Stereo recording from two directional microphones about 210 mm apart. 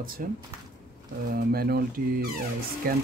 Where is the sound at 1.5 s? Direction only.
45° right (ahead or behind).